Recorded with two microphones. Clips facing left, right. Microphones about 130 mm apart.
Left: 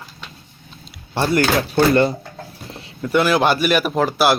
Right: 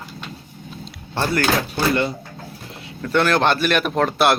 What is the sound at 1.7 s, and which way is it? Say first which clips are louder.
Speech: left 6 dB; 45° left (ahead or behind).